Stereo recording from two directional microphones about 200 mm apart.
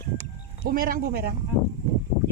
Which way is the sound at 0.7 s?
45° right (ahead or behind).